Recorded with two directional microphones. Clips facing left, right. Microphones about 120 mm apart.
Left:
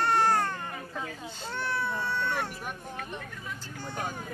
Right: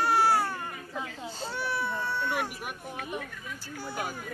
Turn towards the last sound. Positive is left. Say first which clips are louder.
# right 1 dB
turn(degrees=-10)  # may be behind; listen again after turning